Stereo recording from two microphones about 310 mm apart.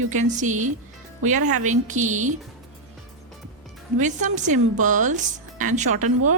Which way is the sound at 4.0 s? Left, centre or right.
Right.